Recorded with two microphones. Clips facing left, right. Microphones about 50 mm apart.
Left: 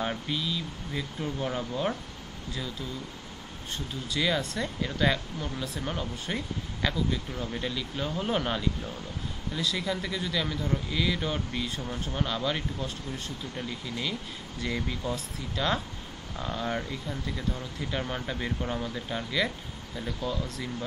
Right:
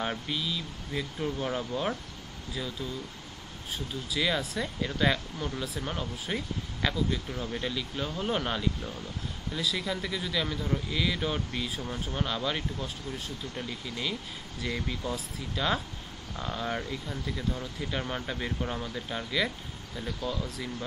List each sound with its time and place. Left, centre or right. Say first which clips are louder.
0.0 s speech: left 1 dB; centre